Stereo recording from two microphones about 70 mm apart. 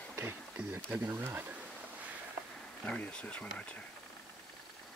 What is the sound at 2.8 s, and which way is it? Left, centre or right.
Speech, centre.